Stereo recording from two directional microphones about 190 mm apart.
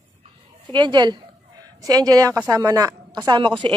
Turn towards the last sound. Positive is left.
turn(degrees=-25)  # may be behind; listen again after turning